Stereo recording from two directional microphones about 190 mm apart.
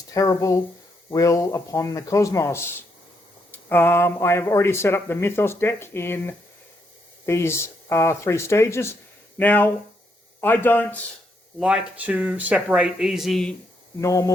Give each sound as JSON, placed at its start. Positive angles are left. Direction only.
{"t": 0.1, "sound": "speech", "side_deg": 15}
{"t": 11.6, "sound": "speech", "side_deg": -5}
{"t": 14.0, "sound": "speech", "side_deg": 20}